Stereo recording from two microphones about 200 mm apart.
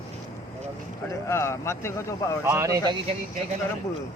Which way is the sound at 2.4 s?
15° right (ahead or behind).